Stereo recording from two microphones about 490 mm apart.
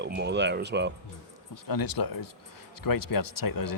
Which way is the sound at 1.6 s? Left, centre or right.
Left.